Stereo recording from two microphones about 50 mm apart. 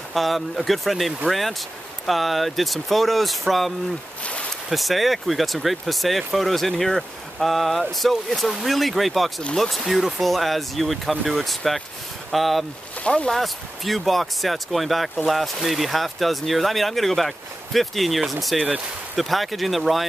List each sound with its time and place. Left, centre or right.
0.1 s speech: centre
4.2 s a sound: left
4.6 s speech: centre
13.0 s speech: centre
13.3 s speech: centre